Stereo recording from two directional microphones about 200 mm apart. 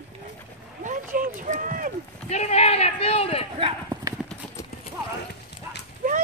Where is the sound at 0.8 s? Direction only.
40° right (ahead or behind).